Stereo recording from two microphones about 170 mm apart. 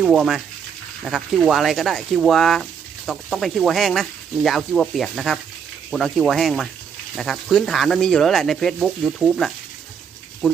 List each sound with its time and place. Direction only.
0.0 s speech: 5° right (ahead or behind)